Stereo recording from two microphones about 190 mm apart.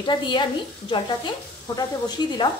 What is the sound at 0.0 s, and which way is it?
Speech, 25° left (ahead or behind).